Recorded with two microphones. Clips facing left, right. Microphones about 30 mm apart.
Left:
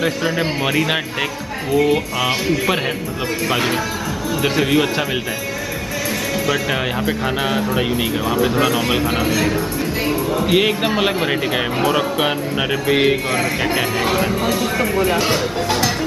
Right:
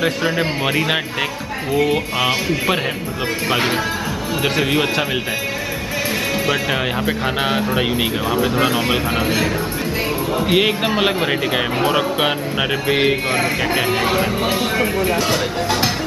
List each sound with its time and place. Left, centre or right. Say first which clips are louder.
0.0 s speech: right 1 dB; centre
7.4 s speech: right 1 dB; centre
8.3 s speech: left 1 dB; centre
10.4 s speech: even; centre
14.4 s speech: even; right